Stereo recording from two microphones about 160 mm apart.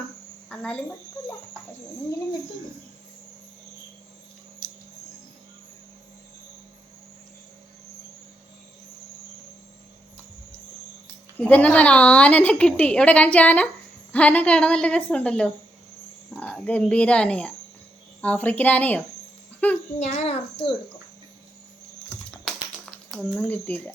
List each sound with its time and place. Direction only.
0.5 s speech: 5° left (ahead or behind)
11.3 s a woman's voice: 10° left (ahead or behind)
20.0 s a child's voice: 45° left (ahead or behind)
22.1 s typing: 10° left (ahead or behind)
23.5 s a woman's voice: 10° left (ahead or behind)